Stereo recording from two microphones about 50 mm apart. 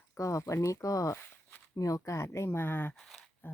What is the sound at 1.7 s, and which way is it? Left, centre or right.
Speech, left.